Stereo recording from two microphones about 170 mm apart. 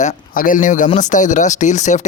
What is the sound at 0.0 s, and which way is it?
A man's voice, 50° left (ahead or behind).